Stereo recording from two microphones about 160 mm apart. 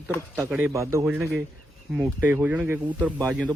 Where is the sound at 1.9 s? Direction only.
5° right (ahead or behind).